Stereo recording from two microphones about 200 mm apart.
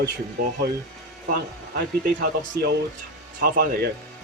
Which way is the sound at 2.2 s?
50° right (ahead or behind).